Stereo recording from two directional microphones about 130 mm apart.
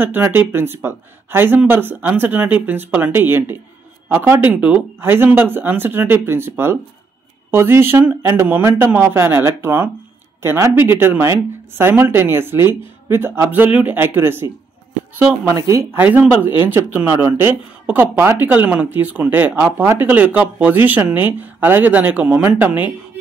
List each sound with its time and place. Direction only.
0.0 s speech: 15° right (ahead or behind)
15.5 s speech: 25° right (ahead or behind)
16.0 s speech: 10° right (ahead or behind)